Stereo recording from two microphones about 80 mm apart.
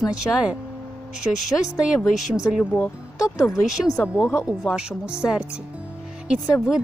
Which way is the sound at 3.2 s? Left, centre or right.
Left.